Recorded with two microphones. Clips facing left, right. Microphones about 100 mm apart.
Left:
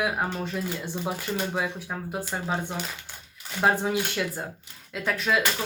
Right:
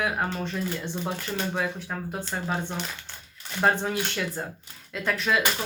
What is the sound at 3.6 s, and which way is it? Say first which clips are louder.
Speech: left 1 dB; 5° left (ahead or behind).